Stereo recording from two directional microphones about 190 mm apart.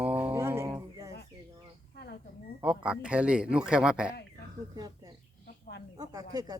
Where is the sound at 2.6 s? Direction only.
5° right (ahead or behind).